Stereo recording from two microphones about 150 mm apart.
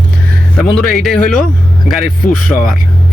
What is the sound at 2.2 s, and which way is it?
Speech, 65° left (ahead or behind).